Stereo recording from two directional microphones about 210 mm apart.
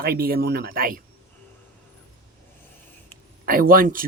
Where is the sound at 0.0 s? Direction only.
45° right (ahead or behind).